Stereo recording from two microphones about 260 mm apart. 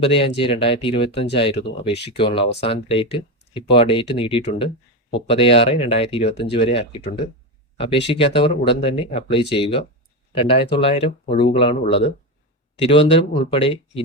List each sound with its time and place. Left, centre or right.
0.0 s speech: left